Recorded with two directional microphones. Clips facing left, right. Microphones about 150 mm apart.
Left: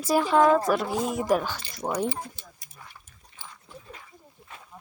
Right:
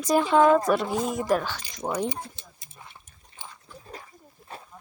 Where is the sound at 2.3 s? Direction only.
25° right (ahead or behind).